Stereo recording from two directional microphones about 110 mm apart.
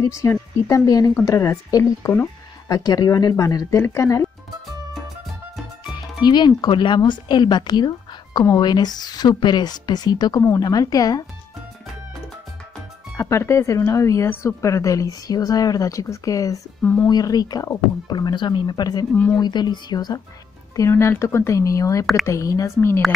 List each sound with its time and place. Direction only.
0.0 s speech: 30° left (ahead or behind)
6.2 s speech: 40° left (ahead or behind)
13.1 s speech: 25° left (ahead or behind)
16.8 s speech: 15° left (ahead or behind)
17.1 s speech: 35° left (ahead or behind)
20.7 s speech: 25° left (ahead or behind)